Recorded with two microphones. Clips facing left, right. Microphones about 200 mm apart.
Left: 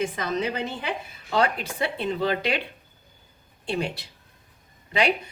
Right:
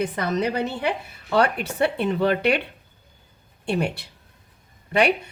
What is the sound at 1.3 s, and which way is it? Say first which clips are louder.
Speech: right 3 dB; 60° right (ahead or behind).